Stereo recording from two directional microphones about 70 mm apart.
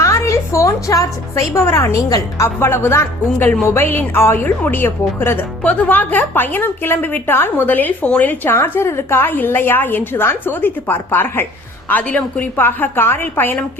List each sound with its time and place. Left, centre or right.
0.0 s a woman's voice: left
2.6 s a woman's voice: left
5.6 s a woman's voice: left
12.5 s a woman's voice: left